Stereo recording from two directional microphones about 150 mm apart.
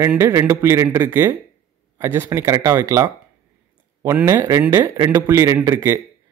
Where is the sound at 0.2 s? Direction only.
20° right (ahead or behind).